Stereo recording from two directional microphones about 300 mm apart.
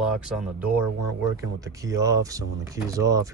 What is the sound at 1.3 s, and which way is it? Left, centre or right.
Speech, centre.